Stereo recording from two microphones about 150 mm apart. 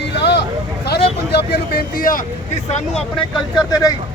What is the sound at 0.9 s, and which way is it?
Vehicle, 90° left.